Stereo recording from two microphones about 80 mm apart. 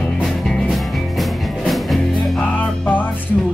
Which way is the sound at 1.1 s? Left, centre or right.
Centre.